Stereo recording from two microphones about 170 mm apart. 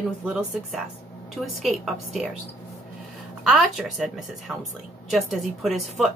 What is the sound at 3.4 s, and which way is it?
Speech, centre (ahead or behind).